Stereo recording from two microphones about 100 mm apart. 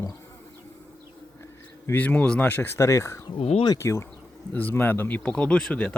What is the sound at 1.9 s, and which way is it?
Speech, 15° left (ahead or behind).